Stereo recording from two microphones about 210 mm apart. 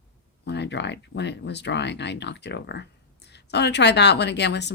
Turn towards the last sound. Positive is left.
turn(degrees=55)  # may be behind; listen again after turning